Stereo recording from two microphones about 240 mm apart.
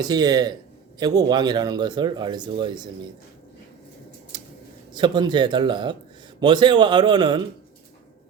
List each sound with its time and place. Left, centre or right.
0.0 s speech: centre
4.3 s scissors: centre
4.9 s a man's voice: centre